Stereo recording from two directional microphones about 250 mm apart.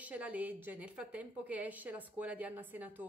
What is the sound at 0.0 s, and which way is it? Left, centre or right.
A woman's voice, centre.